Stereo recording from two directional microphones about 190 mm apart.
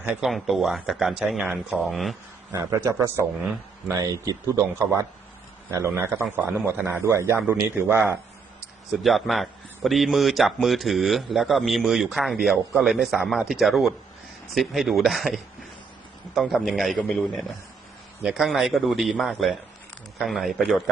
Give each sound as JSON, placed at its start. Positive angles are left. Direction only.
{"t": 0.0, "sound": "a man's voice", "side_deg": -5}
{"t": 2.5, "sound": "a man's voice", "side_deg": -15}
{"t": 8.9, "sound": "a man's voice", "side_deg": 0}